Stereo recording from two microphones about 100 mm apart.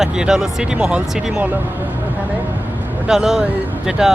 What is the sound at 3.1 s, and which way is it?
Speech, 5° right (ahead or behind).